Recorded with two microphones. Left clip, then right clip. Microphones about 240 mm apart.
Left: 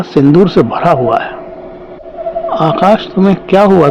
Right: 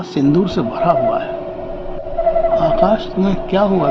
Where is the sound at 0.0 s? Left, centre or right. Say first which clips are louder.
Left 8 dB; left.